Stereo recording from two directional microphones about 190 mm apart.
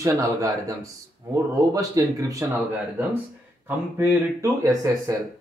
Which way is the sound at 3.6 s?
10° right (ahead or behind).